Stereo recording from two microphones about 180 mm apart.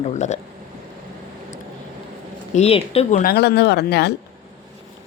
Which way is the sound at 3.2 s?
60° left (ahead or behind).